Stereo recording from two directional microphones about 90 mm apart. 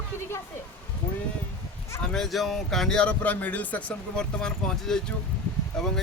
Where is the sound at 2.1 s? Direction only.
Centre (ahead or behind).